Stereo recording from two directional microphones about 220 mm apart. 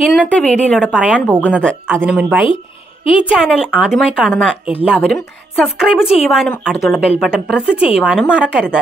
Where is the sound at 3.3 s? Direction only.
5° right (ahead or behind).